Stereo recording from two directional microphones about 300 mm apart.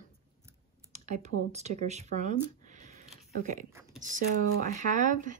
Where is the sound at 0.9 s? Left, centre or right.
Right.